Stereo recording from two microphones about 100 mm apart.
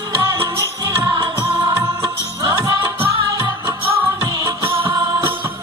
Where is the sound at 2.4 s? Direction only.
30° right (ahead or behind).